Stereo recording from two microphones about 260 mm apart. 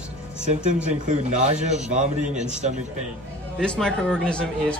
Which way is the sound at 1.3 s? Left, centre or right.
Right.